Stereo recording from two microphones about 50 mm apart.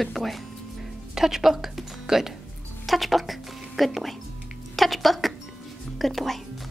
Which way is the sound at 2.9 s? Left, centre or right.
Centre.